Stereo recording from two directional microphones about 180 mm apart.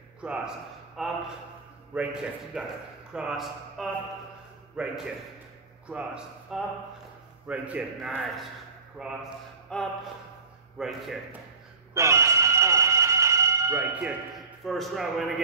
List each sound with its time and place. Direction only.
0.2 s a man's voice: 5° right (ahead or behind)
11.9 s a sound: 15° right (ahead or behind)
14.6 s a man's voice: centre (ahead or behind)